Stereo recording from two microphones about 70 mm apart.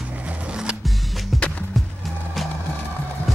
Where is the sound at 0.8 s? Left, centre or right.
Centre.